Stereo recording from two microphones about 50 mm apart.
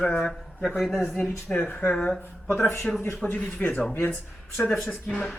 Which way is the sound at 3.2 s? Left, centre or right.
Left.